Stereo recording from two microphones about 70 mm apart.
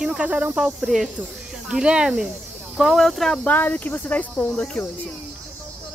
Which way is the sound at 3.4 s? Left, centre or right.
Left.